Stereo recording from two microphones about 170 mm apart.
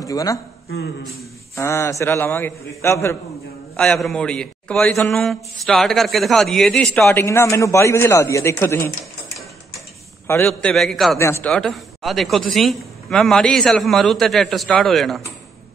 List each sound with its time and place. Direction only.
0.0 s speech: 20° left (ahead or behind)
1.5 s a man's voice: 15° left (ahead or behind)
10.2 s a man's voice: 10° left (ahead or behind)
11.1 s a man's voice: 15° left (ahead or behind)